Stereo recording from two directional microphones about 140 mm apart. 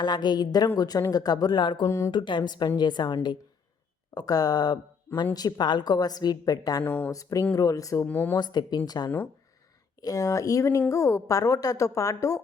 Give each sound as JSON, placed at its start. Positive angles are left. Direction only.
{"t": 0.0, "sound": "a woman's voice", "side_deg": 30}
{"t": 1.8, "sound": "speech", "side_deg": 20}
{"t": 2.0, "sound": "a woman's voice", "side_deg": 35}
{"t": 6.8, "sound": "speech", "side_deg": 10}
{"t": 7.1, "sound": "speech", "side_deg": 25}
{"t": 8.0, "sound": "speech", "side_deg": 10}
{"t": 8.4, "sound": "speech", "side_deg": 30}